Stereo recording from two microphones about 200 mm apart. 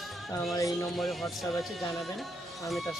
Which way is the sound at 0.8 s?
Centre (ahead or behind).